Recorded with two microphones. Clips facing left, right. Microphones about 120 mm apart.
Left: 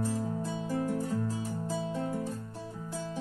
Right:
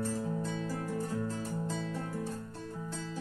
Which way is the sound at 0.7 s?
10° left (ahead or behind).